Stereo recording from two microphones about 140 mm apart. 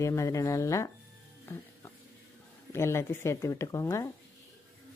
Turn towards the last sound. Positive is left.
turn(degrees=20)  # may be behind; listen again after turning